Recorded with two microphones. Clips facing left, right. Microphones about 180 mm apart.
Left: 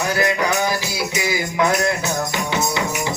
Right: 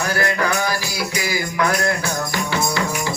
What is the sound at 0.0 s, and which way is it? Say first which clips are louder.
Music: left 1 dB; 20° left (ahead or behind).